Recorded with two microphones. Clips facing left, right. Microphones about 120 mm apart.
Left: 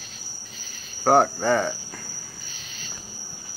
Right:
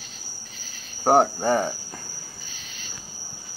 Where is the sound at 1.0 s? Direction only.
20° right (ahead or behind).